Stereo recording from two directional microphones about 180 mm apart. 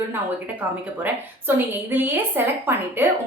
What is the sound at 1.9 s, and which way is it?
A woman's voice, 10° right (ahead or behind).